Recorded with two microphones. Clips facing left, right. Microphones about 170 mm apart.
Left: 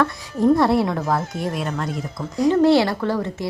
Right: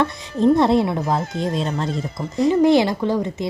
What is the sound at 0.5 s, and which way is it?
Speech, 20° right (ahead or behind).